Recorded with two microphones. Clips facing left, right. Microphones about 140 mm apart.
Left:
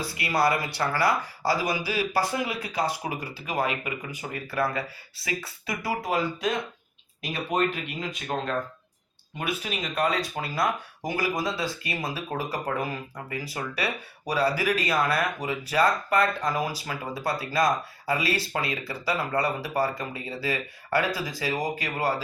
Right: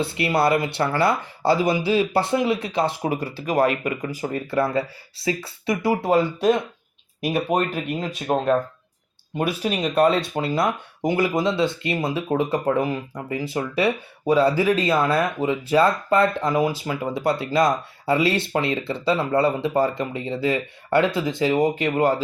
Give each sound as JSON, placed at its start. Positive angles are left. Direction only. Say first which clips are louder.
{"t": 0.0, "sound": "speech", "louder": "right 4 dB", "side_deg": -25}
{"t": 7.3, "sound": "speech", "louder": "right 5 dB", "side_deg": -45}
{"t": 9.4, "sound": "speech", "louder": "right 8 dB", "side_deg": -30}